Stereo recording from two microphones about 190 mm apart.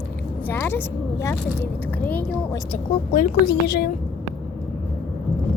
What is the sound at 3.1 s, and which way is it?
Speech, 45° left (ahead or behind).